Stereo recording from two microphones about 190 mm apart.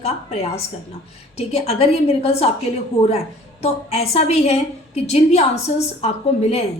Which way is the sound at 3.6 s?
35° left (ahead or behind).